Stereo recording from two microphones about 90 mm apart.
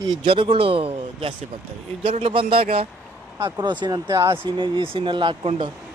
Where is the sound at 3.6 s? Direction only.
55° right (ahead or behind).